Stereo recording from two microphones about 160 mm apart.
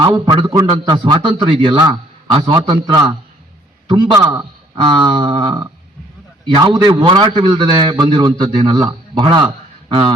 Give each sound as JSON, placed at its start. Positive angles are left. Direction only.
{"t": 0.0, "sound": "a man's voice", "side_deg": -30}
{"t": 4.2, "sound": "a man's voice", "side_deg": -15}
{"t": 4.8, "sound": "a man's voice", "side_deg": -30}